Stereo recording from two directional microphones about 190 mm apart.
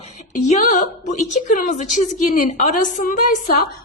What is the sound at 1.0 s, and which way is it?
A woman's voice, 40° left (ahead or behind).